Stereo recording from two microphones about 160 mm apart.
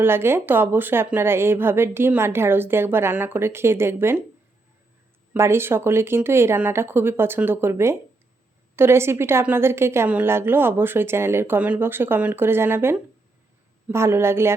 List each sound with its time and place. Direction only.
0.0 s a woman's voice: 15° right (ahead or behind)
5.3 s a woman's voice: 15° right (ahead or behind)